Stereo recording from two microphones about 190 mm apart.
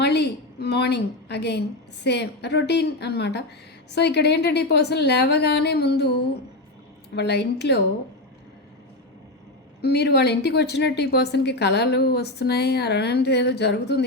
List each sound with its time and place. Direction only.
0.0 s a woman's voice: 60° left (ahead or behind)
7.2 s a woman's voice: 65° left (ahead or behind)
9.8 s a woman's voice: 60° left (ahead or behind)